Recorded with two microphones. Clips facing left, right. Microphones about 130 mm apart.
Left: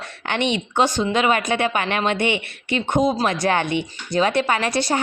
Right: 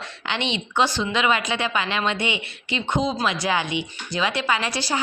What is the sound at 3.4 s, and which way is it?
A woman's voice, 55° left (ahead or behind).